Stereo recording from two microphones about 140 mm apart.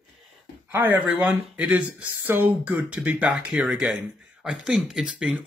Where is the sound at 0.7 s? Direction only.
15° right (ahead or behind).